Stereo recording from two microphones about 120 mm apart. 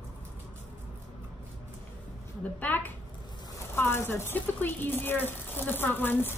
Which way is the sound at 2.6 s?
15° left (ahead or behind).